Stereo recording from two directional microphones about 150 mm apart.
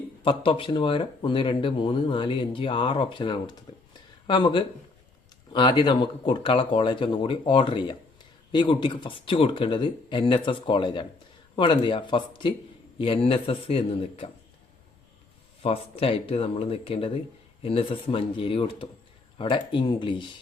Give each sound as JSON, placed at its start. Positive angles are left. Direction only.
{"t": 0.2, "sound": "speech", "side_deg": 35}
{"t": 15.6, "sound": "speech", "side_deg": 40}